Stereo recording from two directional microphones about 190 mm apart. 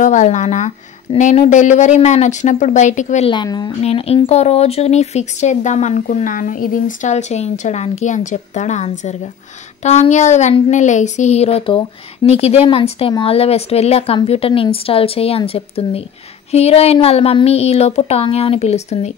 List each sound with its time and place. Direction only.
0.0 s speech: 40° left (ahead or behind)
3.3 s speech: 25° left (ahead or behind)
3.8 s speech: 30° left (ahead or behind)